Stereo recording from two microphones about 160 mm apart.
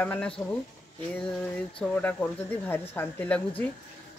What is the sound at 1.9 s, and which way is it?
Speech, 10° left (ahead or behind).